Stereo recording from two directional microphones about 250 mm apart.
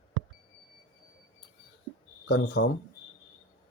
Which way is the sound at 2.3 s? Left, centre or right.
Left.